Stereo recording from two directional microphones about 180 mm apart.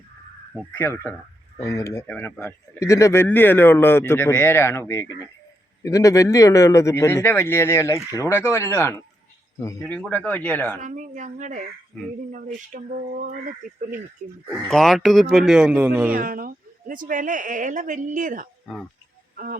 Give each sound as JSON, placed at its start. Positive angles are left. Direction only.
{"t": 0.7, "sound": "a man's voice", "side_deg": 10}
{"t": 10.8, "sound": "a woman's voice", "side_deg": -45}
{"t": 14.7, "sound": "speech", "side_deg": 0}
{"t": 16.1, "sound": "a woman's voice", "side_deg": -50}